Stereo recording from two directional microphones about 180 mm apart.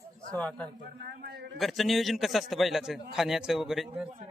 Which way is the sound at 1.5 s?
Centre (ahead or behind).